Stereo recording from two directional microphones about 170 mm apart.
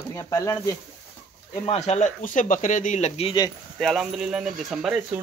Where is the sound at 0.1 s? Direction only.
20° left (ahead or behind).